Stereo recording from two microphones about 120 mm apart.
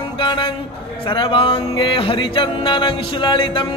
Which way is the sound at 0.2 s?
40° left (ahead or behind).